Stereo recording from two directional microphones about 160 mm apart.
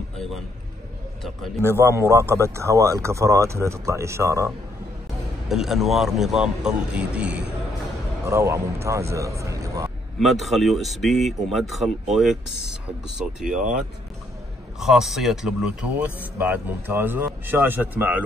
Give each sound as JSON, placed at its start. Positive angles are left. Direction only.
{"t": 1.6, "sound": "speech", "side_deg": -15}
{"t": 5.5, "sound": "speech", "side_deg": 0}
{"t": 10.1, "sound": "speech", "side_deg": 0}
{"t": 13.4, "sound": "speech", "side_deg": -5}